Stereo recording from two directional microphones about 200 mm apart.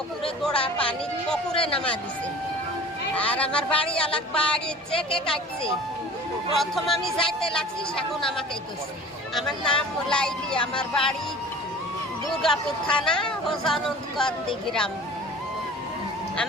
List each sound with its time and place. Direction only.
0.4 s speech: 5° left (ahead or behind)
1.5 s a man's voice: 30° left (ahead or behind)
3.2 s speech: 5° left (ahead or behind)
6.6 s speech: centre (ahead or behind)
9.3 s speech: 5° left (ahead or behind)
12.4 s speech: 5° left (ahead or behind)